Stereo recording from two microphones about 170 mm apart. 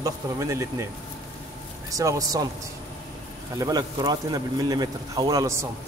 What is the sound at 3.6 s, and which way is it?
A man's voice, 20° right (ahead or behind).